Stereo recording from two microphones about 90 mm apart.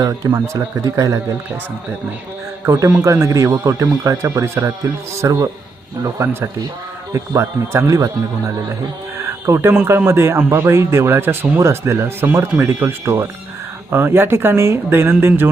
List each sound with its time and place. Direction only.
0.0 s speech: 40° right (ahead or behind)
2.6 s speech: 40° right (ahead or behind)
7.1 s speech: 30° right (ahead or behind)
9.5 s speech: 30° right (ahead or behind)